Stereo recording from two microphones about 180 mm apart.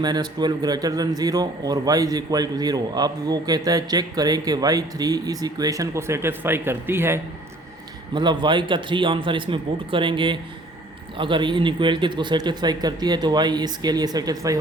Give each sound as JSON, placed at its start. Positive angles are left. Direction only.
{"t": 0.0, "sound": "a man's voice", "side_deg": -25}
{"t": 8.1, "sound": "a man's voice", "side_deg": -25}